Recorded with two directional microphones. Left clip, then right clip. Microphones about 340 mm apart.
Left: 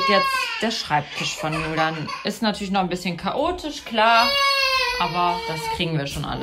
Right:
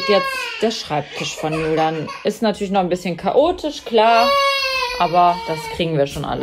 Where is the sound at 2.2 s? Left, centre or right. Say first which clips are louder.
Right 6 dB; left.